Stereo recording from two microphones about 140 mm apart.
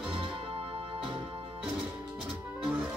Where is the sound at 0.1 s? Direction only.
35° right (ahead or behind).